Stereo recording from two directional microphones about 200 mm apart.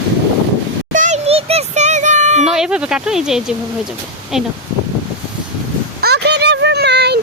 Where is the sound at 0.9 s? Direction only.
35° right (ahead or behind).